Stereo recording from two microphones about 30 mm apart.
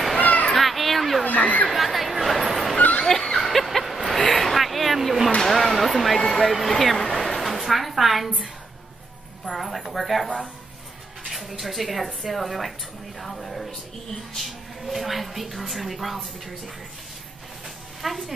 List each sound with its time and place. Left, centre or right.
0.2 s children playing: left
0.5 s children playing: centre
1.2 s chatter: left
1.7 s chatter: centre
2.4 s dog: centre
3.1 s a sound: centre
3.3 s a sound: centre
7.3 s a sound: centre
9.5 s a woman's voice: centre
16.2 s a woman's voice: centre
18.0 s a woman's voice: centre